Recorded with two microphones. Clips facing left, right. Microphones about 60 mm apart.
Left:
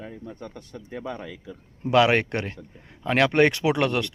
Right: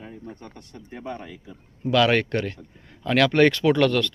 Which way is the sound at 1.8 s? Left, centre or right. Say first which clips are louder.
Left 1 dB; left.